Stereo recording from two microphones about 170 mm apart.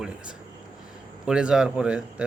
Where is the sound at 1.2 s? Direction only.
5° right (ahead or behind).